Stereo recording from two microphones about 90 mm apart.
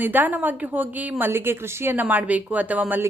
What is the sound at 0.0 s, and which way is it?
A woman's voice, 20° right (ahead or behind).